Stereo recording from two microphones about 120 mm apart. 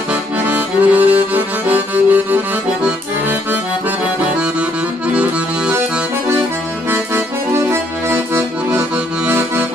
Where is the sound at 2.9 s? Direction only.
15° right (ahead or behind).